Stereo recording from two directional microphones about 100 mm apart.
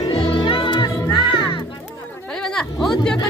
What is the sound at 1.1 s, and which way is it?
Music, 55° left (ahead or behind).